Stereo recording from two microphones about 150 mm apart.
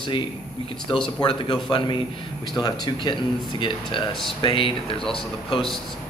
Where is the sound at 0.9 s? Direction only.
30° left (ahead or behind).